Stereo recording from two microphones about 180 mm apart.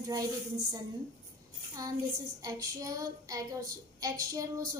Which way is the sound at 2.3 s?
20° right (ahead or behind).